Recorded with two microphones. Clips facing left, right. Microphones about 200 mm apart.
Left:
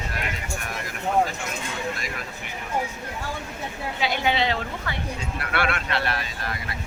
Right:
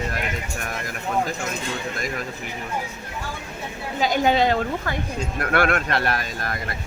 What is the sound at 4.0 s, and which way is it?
Speech, 45° right (ahead or behind).